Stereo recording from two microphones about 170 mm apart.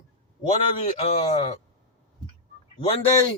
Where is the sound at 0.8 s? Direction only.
40° left (ahead or behind).